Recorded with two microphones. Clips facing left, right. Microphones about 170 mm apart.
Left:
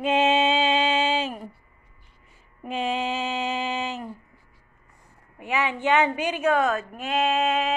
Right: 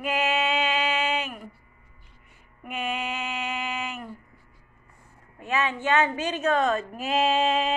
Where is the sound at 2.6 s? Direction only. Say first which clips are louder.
Left 4 dB; 25° left (ahead or behind).